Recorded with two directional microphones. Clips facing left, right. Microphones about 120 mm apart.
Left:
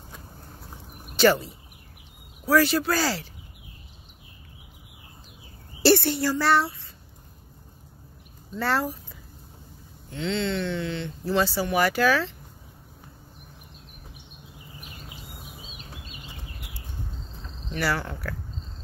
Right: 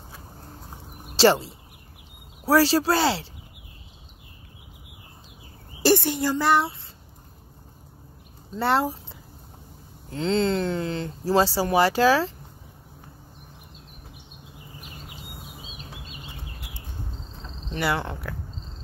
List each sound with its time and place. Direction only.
1.0 s a sound: 30° right (ahead or behind)
2.4 s speech: 30° right (ahead or behind)
5.8 s a woman's voice: 15° right (ahead or behind)
8.5 s speech: 25° right (ahead or behind)
10.0 s speech: 35° right (ahead or behind)
17.6 s speech: 20° right (ahead or behind)